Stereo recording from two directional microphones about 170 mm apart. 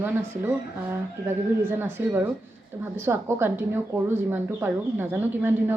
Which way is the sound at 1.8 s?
10° right (ahead or behind).